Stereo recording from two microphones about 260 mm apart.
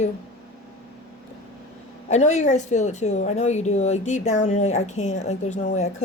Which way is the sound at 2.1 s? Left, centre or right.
Left.